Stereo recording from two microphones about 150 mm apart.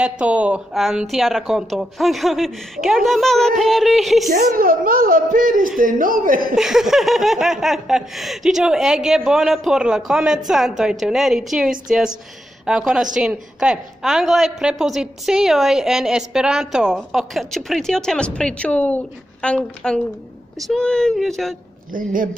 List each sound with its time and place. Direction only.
0.0 s a woman's voice: 10° right (ahead or behind)
4.3 s a woman's voice: 70° right (ahead or behind)
6.5 s a woman's voice: 5° right (ahead or behind)
21.9 s speech: 65° right (ahead or behind)